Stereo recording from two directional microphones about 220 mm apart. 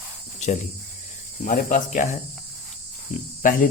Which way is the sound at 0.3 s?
30° left (ahead or behind).